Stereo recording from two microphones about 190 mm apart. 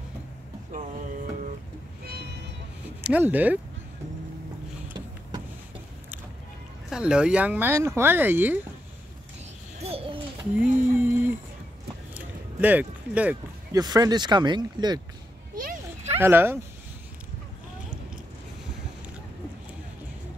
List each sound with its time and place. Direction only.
3.0 s speech: 10° right (ahead or behind)
6.9 s speech: 5° right (ahead or behind)
9.8 s owl: 30° right (ahead or behind)
10.6 s a sound: 10° right (ahead or behind)
13.7 s speech: 20° right (ahead or behind)
15.5 s a sound: 45° right (ahead or behind)
16.2 s speech: 10° right (ahead or behind)